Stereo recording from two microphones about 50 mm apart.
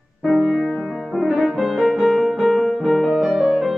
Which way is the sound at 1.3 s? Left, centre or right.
Centre.